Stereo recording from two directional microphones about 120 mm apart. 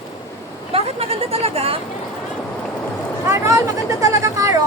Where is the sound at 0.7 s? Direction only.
55° right (ahead or behind).